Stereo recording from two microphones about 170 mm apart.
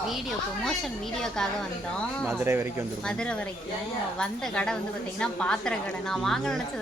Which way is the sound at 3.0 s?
5° left (ahead or behind).